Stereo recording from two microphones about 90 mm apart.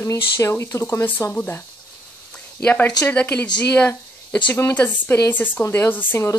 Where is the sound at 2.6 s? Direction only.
20° left (ahead or behind).